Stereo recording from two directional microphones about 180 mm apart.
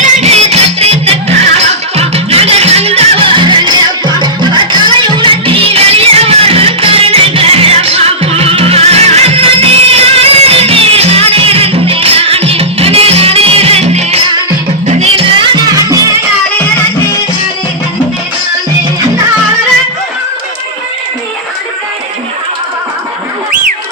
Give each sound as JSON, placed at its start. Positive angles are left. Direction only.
{"t": 0.0, "sound": "music", "side_deg": -35}